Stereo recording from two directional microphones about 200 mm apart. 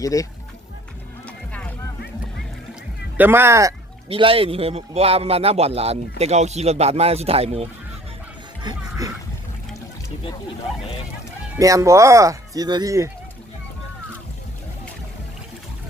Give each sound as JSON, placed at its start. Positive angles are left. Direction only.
{"t": 0.0, "sound": "speech", "side_deg": 15}
{"t": 1.5, "sound": "boat", "side_deg": 5}
{"t": 3.2, "sound": "speech", "side_deg": -10}
{"t": 4.1, "sound": "speech", "side_deg": -30}
{"t": 8.6, "sound": "speech", "side_deg": -15}
{"t": 11.5, "sound": "speech", "side_deg": -15}